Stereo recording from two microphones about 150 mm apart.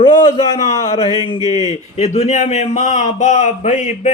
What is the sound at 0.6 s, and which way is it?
Speech, 50° left (ahead or behind).